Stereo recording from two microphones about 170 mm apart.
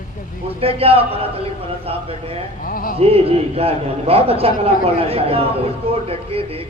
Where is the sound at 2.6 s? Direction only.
55° left (ahead or behind).